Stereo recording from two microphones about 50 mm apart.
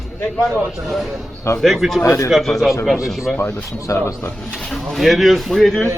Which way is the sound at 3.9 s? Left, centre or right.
Left.